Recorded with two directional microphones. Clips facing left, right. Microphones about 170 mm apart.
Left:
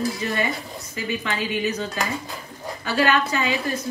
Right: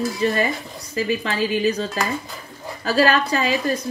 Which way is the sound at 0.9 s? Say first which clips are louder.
Right 5 dB; 35° right (ahead or behind).